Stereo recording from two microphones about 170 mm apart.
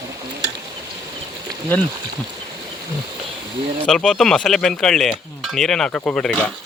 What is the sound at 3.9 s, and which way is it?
Speech, 5° left (ahead or behind).